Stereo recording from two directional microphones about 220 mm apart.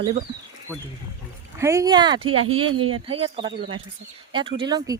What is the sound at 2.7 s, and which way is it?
Speech, 70° right (ahead or behind).